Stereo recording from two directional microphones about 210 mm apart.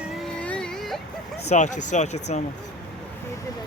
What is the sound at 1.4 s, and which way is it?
Speech, 35° left (ahead or behind).